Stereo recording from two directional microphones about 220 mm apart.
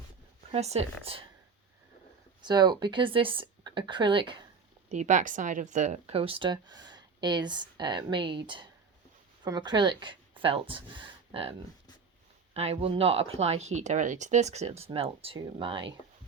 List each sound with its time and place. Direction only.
0.5 s speech: 30° right (ahead or behind)
2.4 s speech: 20° right (ahead or behind)
4.9 s a woman's voice: 30° right (ahead or behind)
12.5 s speech: 30° right (ahead or behind)